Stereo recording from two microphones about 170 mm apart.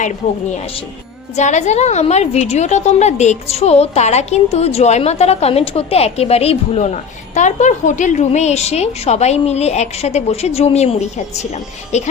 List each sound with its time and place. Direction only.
1.4 s a woman's voice: 45° left (ahead or behind)